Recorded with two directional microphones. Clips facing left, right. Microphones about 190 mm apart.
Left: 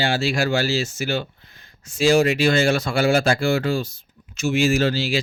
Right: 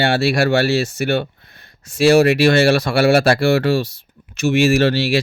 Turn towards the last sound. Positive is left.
turn(degrees=-65)  # may be behind; listen again after turning